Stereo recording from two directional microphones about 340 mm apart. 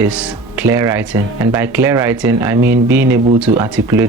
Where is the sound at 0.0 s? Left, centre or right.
Centre.